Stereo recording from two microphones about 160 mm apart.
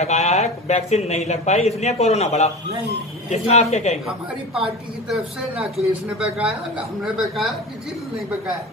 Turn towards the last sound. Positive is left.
turn(degrees=0)  # may be behind; listen again after turning